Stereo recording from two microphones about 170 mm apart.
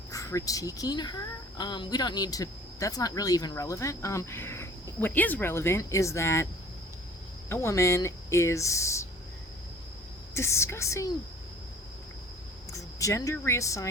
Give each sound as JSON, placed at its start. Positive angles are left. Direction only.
{"t": 0.1, "sound": "speech", "side_deg": 20}
{"t": 7.5, "sound": "speech", "side_deg": 15}
{"t": 10.3, "sound": "speech", "side_deg": 15}
{"t": 12.7, "sound": "speech", "side_deg": 20}